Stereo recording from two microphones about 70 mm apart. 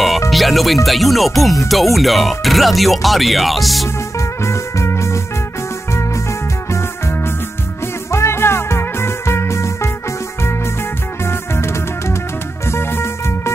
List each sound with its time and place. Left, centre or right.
0.3 s music: centre
0.8 s speech: centre
4.4 s music: left
6.7 s music: left
11.2 s music: left